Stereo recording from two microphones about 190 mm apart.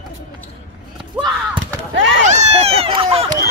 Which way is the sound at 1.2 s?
25° right (ahead or behind).